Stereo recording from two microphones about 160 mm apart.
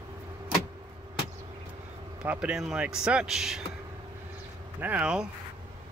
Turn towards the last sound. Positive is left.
turn(degrees=-5)  # may be behind; listen again after turning